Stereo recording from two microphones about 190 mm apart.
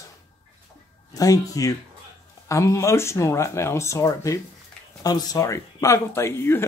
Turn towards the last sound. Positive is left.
turn(degrees=15)  # may be behind; listen again after turning